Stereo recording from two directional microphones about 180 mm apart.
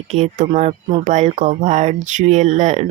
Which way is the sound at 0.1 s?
40° right (ahead or behind).